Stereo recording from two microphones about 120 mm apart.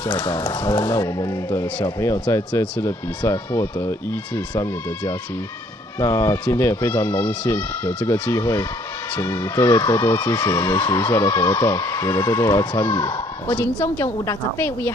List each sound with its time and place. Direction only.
0.3 s speech: 35° left (ahead or behind)
5.9 s speech: 25° left (ahead or behind)